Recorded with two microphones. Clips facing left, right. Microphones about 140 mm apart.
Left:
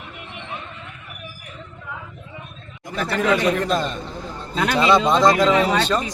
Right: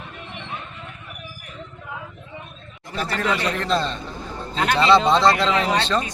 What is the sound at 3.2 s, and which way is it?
Speech, 15° left (ahead or behind).